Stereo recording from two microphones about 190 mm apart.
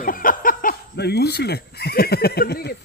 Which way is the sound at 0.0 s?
45° left (ahead or behind).